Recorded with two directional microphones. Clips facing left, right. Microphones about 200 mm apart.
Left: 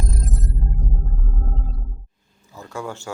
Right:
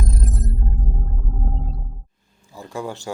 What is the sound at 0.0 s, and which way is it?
Music, centre (ahead or behind).